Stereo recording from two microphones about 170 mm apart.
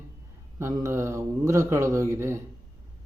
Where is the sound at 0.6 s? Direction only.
15° right (ahead or behind).